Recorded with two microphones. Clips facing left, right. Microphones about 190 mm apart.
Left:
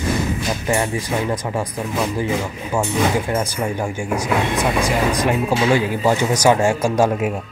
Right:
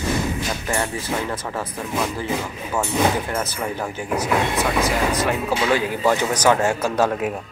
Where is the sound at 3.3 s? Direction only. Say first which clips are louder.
Left 4 dB; 15° left (ahead or behind).